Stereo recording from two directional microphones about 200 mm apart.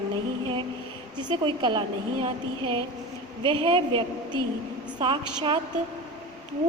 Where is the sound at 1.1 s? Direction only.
20° right (ahead or behind).